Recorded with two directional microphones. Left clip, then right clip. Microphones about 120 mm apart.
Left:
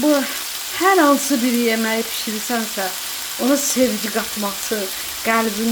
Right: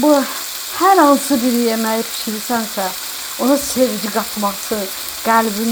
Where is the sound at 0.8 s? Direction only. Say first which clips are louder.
Right 4 dB; centre (ahead or behind).